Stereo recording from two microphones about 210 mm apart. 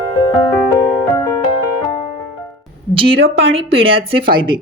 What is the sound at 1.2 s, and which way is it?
Music, 20° left (ahead or behind).